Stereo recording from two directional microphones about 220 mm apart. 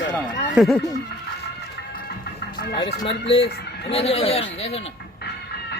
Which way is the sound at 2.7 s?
20° left (ahead or behind).